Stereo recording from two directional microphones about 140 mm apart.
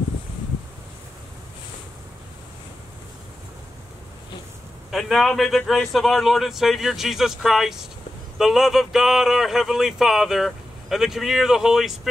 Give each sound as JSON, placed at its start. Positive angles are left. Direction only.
{"t": 4.9, "sound": "speech", "side_deg": 0}